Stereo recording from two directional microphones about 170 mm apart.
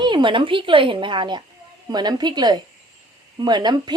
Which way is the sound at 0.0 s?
25° right (ahead or behind).